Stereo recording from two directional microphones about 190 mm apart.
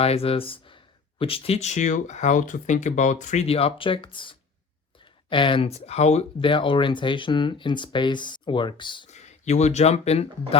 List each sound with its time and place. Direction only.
0.0 s speech: 30° left (ahead or behind)
9.0 s speech: 35° left (ahead or behind)